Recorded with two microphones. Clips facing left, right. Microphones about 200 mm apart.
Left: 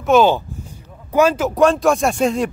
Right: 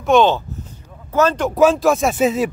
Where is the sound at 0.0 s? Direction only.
5° left (ahead or behind).